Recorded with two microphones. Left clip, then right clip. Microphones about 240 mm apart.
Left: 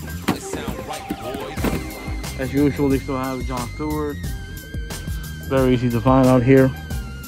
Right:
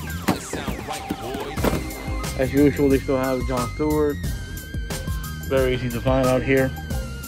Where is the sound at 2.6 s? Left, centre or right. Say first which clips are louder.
Right 1 dB; left.